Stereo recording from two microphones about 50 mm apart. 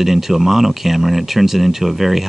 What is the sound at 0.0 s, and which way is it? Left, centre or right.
Speech, centre.